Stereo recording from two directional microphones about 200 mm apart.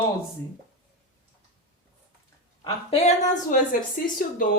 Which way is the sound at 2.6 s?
30° left (ahead or behind).